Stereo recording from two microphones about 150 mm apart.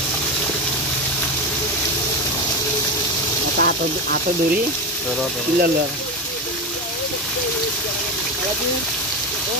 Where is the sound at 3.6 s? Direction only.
90° right.